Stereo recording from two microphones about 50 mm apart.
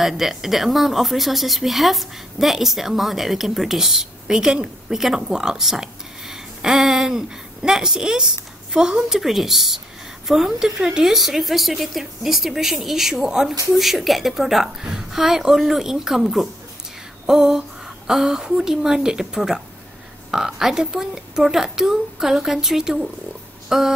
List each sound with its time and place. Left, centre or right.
0.0 s a woman's voice: centre